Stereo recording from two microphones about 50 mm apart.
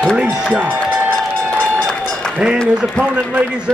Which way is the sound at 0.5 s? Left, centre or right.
Right.